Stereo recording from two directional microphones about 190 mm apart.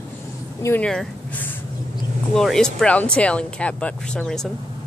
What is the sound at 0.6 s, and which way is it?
Speech, 10° left (ahead or behind).